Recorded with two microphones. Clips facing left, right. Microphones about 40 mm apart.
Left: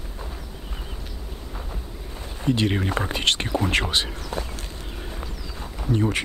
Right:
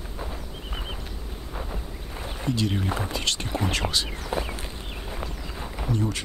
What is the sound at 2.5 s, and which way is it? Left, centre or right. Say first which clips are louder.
Speech: left 4 dB; left.